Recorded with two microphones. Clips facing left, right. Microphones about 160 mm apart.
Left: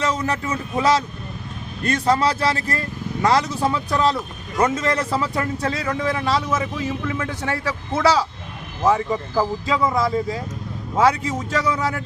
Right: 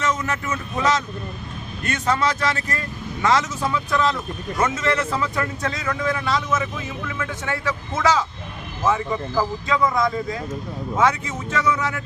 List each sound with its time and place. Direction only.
0.0 s a man's voice: 35° left (ahead or behind)